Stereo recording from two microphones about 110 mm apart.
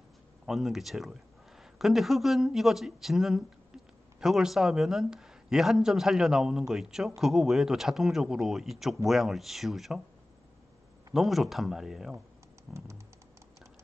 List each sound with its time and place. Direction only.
0.5 s speech: centre (ahead or behind)
11.1 s speech: centre (ahead or behind)
12.7 s typing: 25° right (ahead or behind)